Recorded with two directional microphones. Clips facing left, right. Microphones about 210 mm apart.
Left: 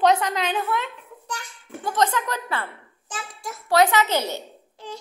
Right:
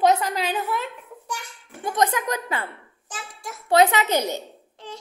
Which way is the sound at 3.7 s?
20° right (ahead or behind).